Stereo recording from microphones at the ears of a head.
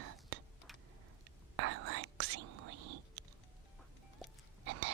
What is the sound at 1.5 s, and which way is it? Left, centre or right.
Whispering, right.